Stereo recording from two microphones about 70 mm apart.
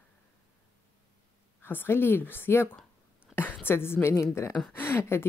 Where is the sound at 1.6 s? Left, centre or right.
Left.